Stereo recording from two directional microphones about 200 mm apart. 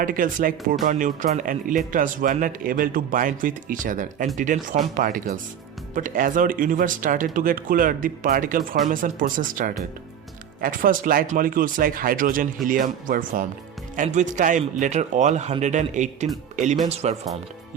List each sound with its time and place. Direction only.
0.0 s speech: 40° right (ahead or behind)